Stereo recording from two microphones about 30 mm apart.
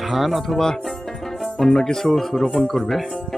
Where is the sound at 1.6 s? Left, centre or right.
Centre.